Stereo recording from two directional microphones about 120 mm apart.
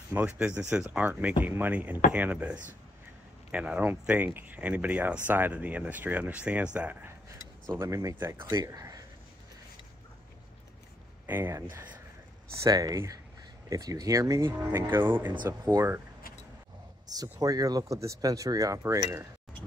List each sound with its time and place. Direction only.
0.1 s speech: 15° right (ahead or behind)
7.7 s speech: 25° right (ahead or behind)
8.5 s a sound: 30° right (ahead or behind)
11.2 s speech: 15° right (ahead or behind)
12.6 s speech: 30° right (ahead or behind)
15.3 s speech: 35° right (ahead or behind)
17.1 s speech: 30° right (ahead or behind)